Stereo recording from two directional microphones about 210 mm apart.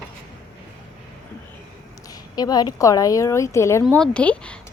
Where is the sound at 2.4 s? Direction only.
20° left (ahead or behind).